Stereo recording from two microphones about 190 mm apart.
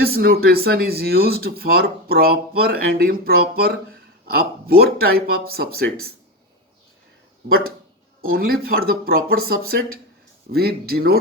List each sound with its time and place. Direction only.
0.0 s speech: 50° right (ahead or behind)
7.4 s speech: 50° right (ahead or behind)